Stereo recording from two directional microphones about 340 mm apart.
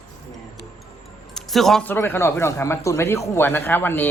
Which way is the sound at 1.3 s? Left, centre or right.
Centre.